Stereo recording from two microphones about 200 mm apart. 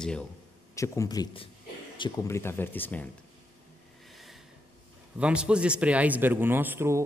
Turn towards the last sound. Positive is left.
turn(degrees=-10)  # may be behind; listen again after turning